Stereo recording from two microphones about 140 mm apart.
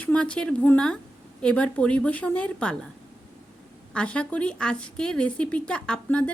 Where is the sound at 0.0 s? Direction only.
10° left (ahead or behind).